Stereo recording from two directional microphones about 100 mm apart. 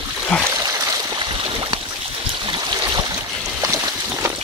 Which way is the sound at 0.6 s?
35° right (ahead or behind).